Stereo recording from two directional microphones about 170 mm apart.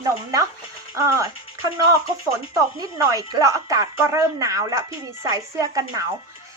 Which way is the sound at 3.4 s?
20° right (ahead or behind).